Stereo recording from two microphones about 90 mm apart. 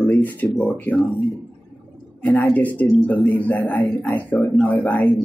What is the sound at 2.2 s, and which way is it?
A man's voice, 15° left (ahead or behind).